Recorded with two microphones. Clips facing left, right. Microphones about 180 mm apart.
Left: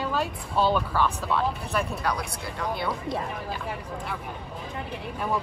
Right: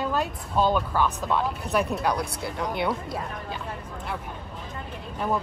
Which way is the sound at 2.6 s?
20° right (ahead or behind).